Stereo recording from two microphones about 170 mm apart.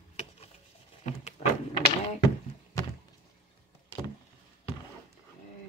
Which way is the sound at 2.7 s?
15° left (ahead or behind).